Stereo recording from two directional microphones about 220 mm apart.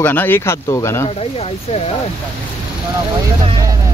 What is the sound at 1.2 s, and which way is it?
Speech, 30° left (ahead or behind).